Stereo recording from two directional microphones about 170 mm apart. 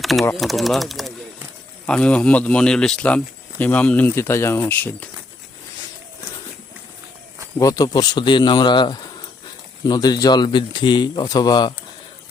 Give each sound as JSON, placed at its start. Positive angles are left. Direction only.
{"t": 0.0, "sound": "speech", "side_deg": 0}
{"t": 7.6, "sound": "speech", "side_deg": 20}